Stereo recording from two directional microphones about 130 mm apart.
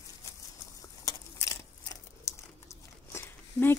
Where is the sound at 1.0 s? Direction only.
25° left (ahead or behind).